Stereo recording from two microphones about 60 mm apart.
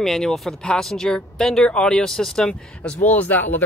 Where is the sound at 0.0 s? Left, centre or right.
Centre.